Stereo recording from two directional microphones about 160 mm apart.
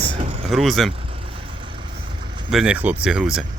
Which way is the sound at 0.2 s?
40° right (ahead or behind).